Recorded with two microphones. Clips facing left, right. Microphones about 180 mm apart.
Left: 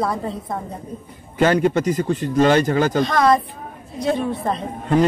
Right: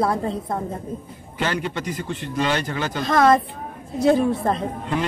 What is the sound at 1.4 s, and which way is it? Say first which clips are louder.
Speech: left 9 dB; 45° left (ahead or behind).